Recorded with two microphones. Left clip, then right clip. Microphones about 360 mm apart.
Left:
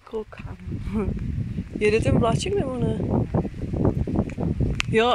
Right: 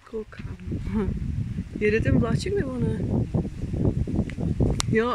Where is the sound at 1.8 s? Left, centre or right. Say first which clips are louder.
Left 3 dB; centre.